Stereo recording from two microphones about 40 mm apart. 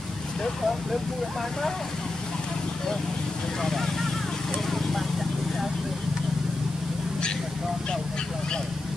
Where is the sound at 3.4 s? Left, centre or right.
Centre.